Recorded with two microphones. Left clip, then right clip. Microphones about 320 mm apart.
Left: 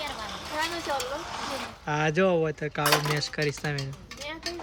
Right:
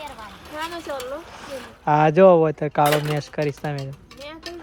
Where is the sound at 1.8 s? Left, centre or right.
Centre.